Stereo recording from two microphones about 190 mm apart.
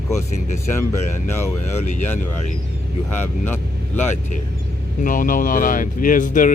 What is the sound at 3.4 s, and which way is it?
Vehicle, 10° left (ahead or behind).